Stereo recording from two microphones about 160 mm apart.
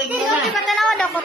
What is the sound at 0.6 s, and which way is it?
Speech, centre (ahead or behind).